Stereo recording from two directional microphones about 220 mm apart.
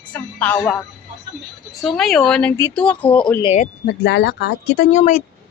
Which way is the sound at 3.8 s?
50° left (ahead or behind).